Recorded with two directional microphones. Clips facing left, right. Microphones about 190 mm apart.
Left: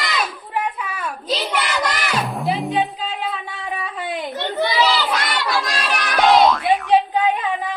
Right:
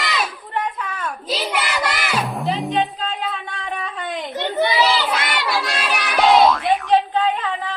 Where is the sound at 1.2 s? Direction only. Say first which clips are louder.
Left 1 dB; 5° right (ahead or behind).